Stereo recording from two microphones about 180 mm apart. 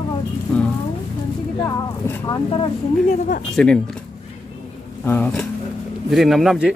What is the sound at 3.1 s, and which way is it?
Speech, 50° left (ahead or behind).